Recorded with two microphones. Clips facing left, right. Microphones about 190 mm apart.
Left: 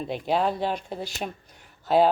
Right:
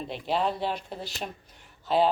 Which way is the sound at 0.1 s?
50° left (ahead or behind).